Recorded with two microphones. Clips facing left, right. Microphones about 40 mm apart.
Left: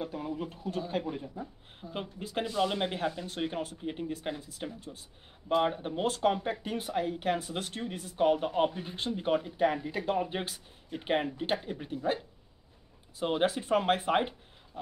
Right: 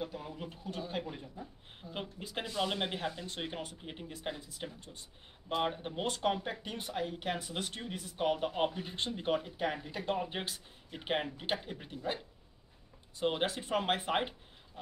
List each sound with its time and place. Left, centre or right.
0.4 s speech: centre
1.2 s speech: left
1.8 s speech: centre
6.5 s speech: centre
6.8 s speech: centre
13.2 s speech: centre